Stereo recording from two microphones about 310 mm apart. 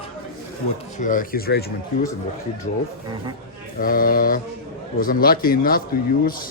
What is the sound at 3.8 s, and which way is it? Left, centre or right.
Speech, left.